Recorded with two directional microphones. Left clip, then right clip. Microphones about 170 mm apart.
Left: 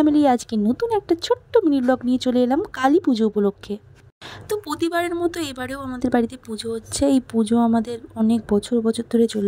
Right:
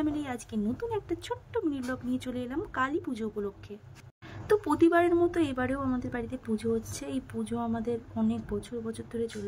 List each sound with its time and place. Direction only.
0.0 s speech: 45° left (ahead or behind)
4.7 s speech: 50° left (ahead or behind)